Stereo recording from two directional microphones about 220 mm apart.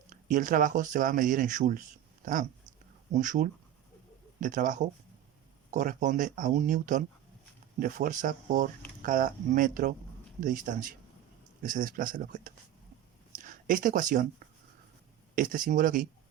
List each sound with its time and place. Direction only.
0.1 s speech: 35° right (ahead or behind)